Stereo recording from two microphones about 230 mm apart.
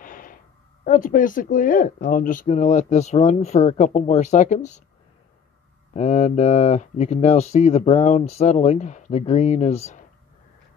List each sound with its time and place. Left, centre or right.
0.0 s a sound: left
0.8 s speech: left
5.9 s speech: left